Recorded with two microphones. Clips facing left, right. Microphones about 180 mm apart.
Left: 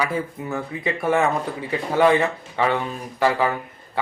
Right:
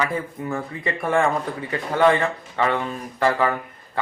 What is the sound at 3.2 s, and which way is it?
Speech, 5° left (ahead or behind).